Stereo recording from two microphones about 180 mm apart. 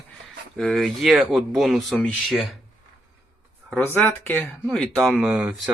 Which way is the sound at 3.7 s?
10° left (ahead or behind).